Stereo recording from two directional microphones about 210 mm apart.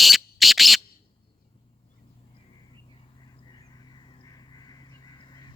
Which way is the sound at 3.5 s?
20° left (ahead or behind).